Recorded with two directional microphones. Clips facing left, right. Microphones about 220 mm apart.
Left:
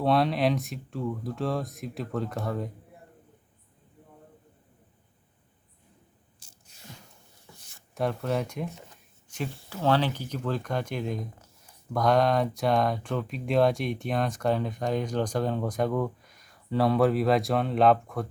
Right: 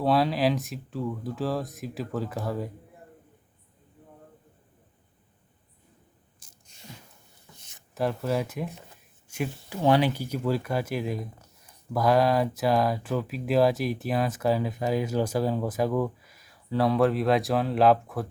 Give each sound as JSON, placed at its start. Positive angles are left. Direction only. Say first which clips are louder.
{"t": 0.0, "sound": "speech", "louder": "right 1 dB", "side_deg": 0}
{"t": 6.4, "sound": "biting", "louder": "left 1 dB", "side_deg": 30}
{"t": 7.9, "sound": "speech", "louder": "right 1 dB", "side_deg": -5}